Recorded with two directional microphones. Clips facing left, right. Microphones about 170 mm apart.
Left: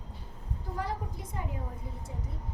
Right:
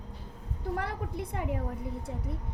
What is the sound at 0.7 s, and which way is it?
Speech, 65° right (ahead or behind).